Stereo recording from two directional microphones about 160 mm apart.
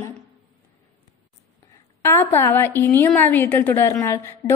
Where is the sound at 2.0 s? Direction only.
15° left (ahead or behind).